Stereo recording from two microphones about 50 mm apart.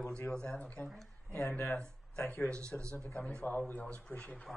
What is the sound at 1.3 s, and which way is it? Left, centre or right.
Speech, left.